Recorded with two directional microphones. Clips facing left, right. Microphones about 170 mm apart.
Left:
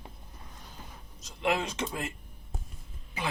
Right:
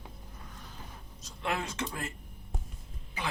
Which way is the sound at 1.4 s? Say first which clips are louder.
Left 4 dB; 20° left (ahead or behind).